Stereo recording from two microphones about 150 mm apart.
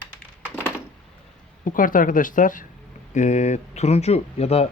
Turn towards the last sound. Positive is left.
turn(degrees=45)  # may be behind; listen again after turning